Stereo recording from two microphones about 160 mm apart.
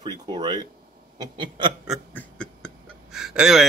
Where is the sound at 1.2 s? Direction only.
30° right (ahead or behind).